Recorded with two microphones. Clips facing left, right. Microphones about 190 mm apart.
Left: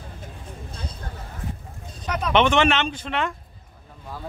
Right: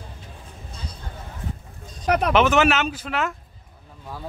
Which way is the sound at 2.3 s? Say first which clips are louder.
Left 2 dB; 5° right (ahead or behind).